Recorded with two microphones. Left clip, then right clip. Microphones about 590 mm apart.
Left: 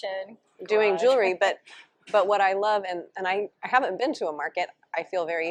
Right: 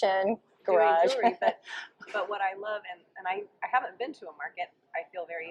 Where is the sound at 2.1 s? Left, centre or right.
Left.